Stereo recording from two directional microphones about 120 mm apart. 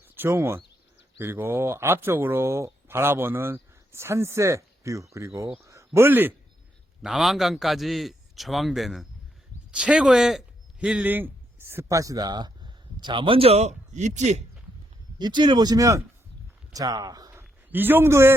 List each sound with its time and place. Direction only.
0.2 s speech: 20° right (ahead or behind)
7.0 s a man's voice: centre (ahead or behind); by 14.4 s 75° right (ahead or behind)
15.2 s speech: 40° right (ahead or behind)
17.7 s speech: 15° right (ahead or behind)